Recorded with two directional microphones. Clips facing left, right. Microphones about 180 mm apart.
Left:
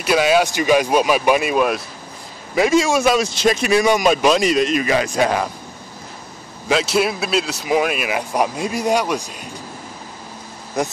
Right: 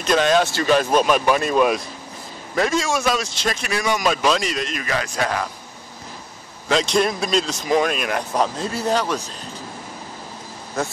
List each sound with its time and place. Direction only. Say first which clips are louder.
0.0 s a man's voice: left 2 dB; 10° left (ahead or behind)
6.7 s a man's voice: left 1 dB; 5° left (ahead or behind)
10.8 s a man's voice: left 3 dB; 15° left (ahead or behind)